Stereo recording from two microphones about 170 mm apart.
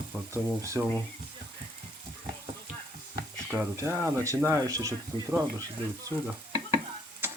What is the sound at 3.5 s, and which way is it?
Speech, 15° right (ahead or behind).